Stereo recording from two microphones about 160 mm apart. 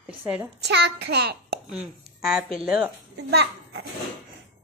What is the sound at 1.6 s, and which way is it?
Speech, centre (ahead or behind).